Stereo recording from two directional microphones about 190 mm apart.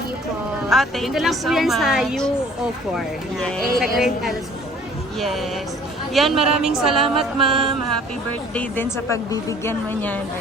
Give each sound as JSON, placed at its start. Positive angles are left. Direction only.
{"t": 0.7, "sound": "a woman's voice", "side_deg": 0}
{"t": 7.3, "sound": "mantra", "side_deg": -30}
{"t": 8.5, "sound": "a woman's voice", "side_deg": 10}